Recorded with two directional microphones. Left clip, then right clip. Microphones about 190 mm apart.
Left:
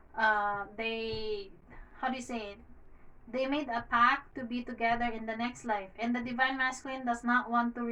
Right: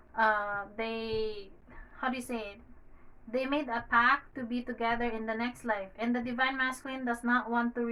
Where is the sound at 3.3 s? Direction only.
20° right (ahead or behind).